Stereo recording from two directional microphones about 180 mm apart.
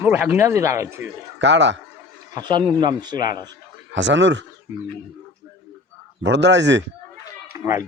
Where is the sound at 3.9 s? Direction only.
90° right.